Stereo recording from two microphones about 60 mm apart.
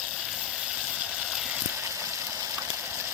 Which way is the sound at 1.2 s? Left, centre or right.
Centre.